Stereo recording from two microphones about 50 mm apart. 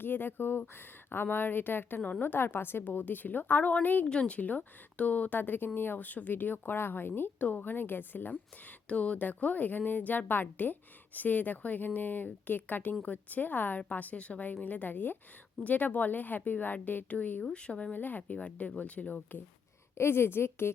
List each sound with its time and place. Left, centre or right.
0.0 s a woman's voice: left
2.8 s speech: left
4.0 s speech: left
7.3 s speech: left
8.9 s speech: left
17.4 s speech: left
17.9 s speech: left
18.2 s speech: left
20.0 s a woman's voice: left